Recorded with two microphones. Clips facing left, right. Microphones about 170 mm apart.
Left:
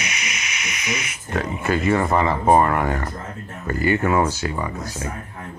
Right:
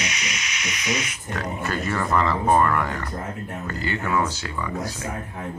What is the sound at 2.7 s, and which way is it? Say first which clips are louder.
Speech: left 3 dB; 50° left (ahead or behind).